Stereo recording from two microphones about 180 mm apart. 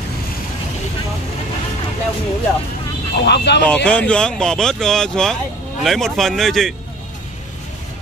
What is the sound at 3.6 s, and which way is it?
Speech, 5° left (ahead or behind).